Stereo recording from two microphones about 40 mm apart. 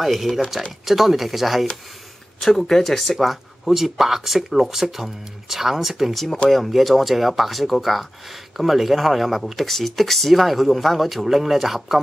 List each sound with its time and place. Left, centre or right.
0.0 s speech: centre